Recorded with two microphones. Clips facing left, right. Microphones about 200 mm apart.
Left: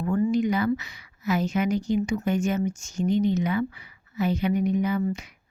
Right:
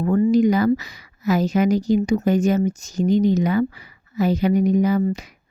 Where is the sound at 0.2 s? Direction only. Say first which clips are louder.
Right 7 dB; 40° right (ahead or behind).